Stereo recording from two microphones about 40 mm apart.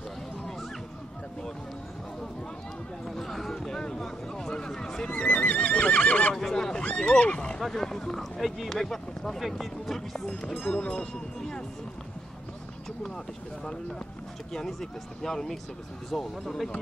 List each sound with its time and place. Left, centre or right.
3.2 s a sound: centre
5.2 s neigh: left
6.3 s neigh: centre
6.8 s neigh: left
7.6 s speech: centre
10.6 s speech: left
14.7 s speech: centre